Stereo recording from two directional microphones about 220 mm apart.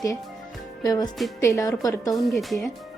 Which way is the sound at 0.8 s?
20° left (ahead or behind).